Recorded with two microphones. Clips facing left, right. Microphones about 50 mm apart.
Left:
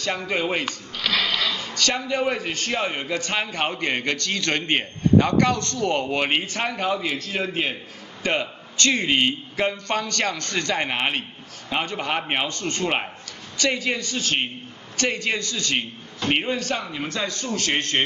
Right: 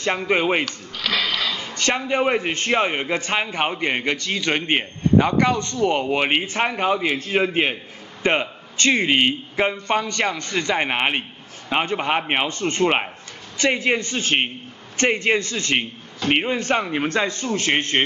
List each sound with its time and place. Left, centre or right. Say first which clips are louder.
0.3 s a man's voice: right 5 dB; right
1.0 s a sound: right 1 dB; centre
1.5 s a man's voice: right 2 dB; right
16.6 s a man's voice: right 6 dB; right